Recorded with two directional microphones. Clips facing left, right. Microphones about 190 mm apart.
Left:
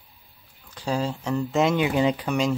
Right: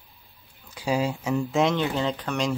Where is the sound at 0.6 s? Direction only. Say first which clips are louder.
Right 1 dB; 10° right (ahead or behind).